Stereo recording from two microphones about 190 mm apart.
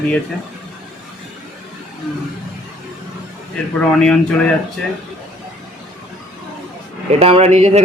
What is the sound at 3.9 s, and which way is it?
Speech, 5° left (ahead or behind).